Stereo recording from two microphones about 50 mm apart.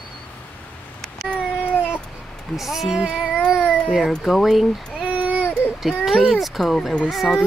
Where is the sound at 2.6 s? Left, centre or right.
Centre.